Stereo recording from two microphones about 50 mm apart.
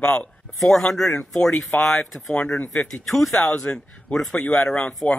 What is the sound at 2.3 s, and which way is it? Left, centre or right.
Speech, left.